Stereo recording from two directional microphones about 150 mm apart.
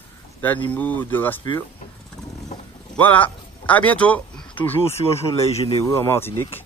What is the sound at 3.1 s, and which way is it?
Speech, 10° left (ahead or behind).